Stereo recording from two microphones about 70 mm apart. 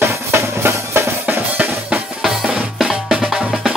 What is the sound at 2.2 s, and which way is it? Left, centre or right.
Drum, centre.